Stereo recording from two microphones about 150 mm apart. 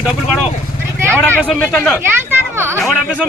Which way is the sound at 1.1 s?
10° left (ahead or behind).